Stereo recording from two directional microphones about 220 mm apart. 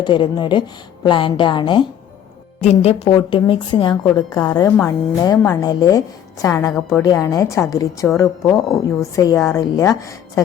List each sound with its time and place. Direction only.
0.0 s a woman's voice: 20° left (ahead or behind)